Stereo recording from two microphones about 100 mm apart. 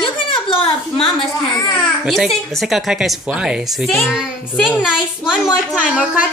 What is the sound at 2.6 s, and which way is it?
Speech, 5° right (ahead or behind).